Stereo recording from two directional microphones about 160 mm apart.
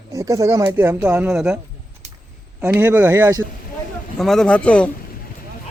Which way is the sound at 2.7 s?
10° right (ahead or behind).